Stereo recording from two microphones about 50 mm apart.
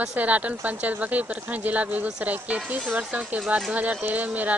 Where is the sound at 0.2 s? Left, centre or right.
Right.